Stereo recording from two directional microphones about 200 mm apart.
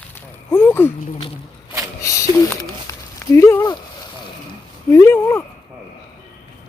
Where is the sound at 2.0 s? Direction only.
15° left (ahead or behind).